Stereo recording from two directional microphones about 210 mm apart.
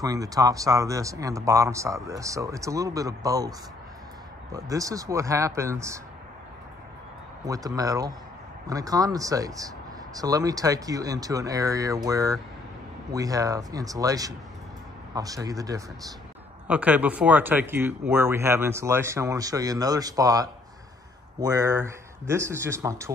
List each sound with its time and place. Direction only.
0.0 s speech: 15° right (ahead or behind)
7.4 s speech: 15° right (ahead or behind)
16.6 s speech: 5° right (ahead or behind)